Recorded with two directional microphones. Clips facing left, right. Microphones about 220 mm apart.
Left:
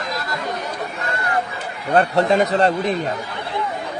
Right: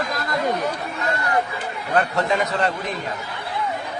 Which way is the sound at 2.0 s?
35° left (ahead or behind).